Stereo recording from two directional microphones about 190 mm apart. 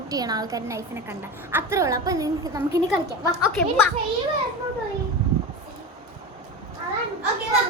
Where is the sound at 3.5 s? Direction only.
5° left (ahead or behind).